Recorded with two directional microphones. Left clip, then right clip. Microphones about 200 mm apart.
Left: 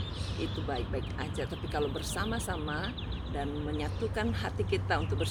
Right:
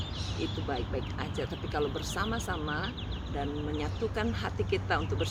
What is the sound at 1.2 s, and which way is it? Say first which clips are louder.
Speech: right 1 dB; 10° left (ahead or behind).